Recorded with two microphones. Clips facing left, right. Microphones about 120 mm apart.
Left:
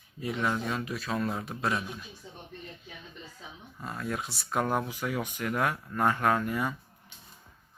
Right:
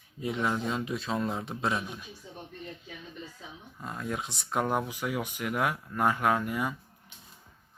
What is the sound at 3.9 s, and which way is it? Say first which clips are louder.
Speech: even; 15° right (ahead or behind).